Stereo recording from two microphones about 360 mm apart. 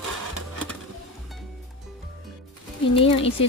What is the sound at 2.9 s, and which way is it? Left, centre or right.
Speech, centre.